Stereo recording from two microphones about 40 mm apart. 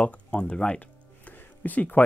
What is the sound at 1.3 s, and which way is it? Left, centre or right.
Music, left.